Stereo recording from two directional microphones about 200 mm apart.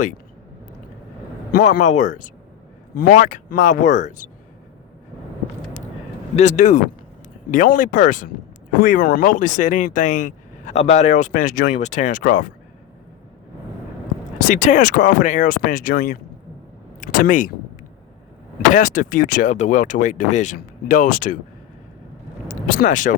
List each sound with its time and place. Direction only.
1.5 s speech: 40° left (ahead or behind)
6.3 s speech: 35° left (ahead or behind)
14.3 s speech: 40° left (ahead or behind)
18.7 s speech: 40° left (ahead or behind)
22.4 s speech: 45° left (ahead or behind)